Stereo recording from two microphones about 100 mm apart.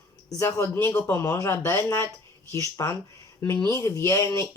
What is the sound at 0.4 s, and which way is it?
Speech, 25° left (ahead or behind).